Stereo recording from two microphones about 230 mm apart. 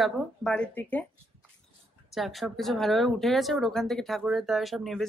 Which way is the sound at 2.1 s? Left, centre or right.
Centre.